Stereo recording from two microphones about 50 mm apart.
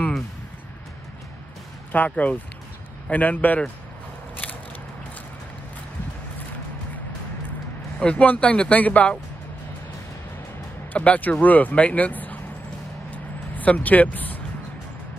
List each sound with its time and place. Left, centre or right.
1.9 s a man's voice: left
8.0 s speech: left
10.9 s a man's voice: left
13.1 s vehicle: left